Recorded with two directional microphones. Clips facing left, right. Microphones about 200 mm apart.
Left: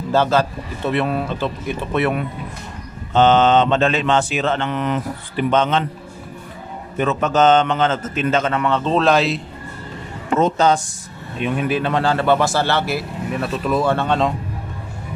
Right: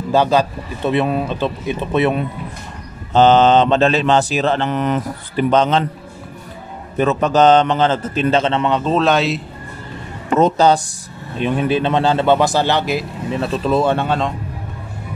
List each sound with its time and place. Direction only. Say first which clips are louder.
0.1 s a man's voice: right 2 dB; 15° right (ahead or behind)
3.1 s mantra: right 3 dB; 35° right (ahead or behind)
7.0 s mantra: right 3 dB; 35° right (ahead or behind)
8.8 s speech: left 1 dB; centre (ahead or behind)
10.4 s mantra: right 3 dB; 35° right (ahead or behind)
11.3 s a man's voice: right 3 dB; 30° right (ahead or behind)
13.9 s speech: even; 5° right (ahead or behind)